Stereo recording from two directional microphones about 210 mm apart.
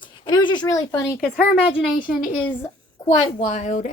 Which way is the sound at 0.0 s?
20° left (ahead or behind).